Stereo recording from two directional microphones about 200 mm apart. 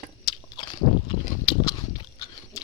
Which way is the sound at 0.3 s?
20° left (ahead or behind).